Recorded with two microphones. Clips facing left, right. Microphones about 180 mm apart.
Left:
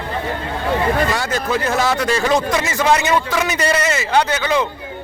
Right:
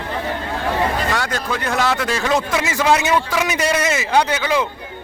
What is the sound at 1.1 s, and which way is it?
Speech, 5° left (ahead or behind).